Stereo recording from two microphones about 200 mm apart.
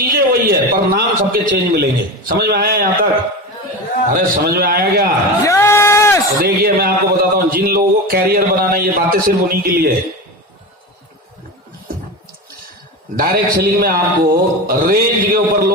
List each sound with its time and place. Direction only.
0.1 s a man's voice: 45° right (ahead or behind)
4.1 s a man's voice: 50° right (ahead or behind)
5.4 s a sound: 15° left (ahead or behind)
6.4 s a man's voice: 50° right (ahead or behind)
13.1 s a man's voice: 45° right (ahead or behind)